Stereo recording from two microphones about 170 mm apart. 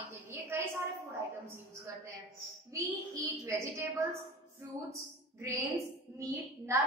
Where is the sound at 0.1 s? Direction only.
15° right (ahead or behind).